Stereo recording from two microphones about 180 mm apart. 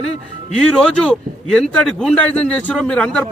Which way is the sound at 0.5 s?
5° left (ahead or behind).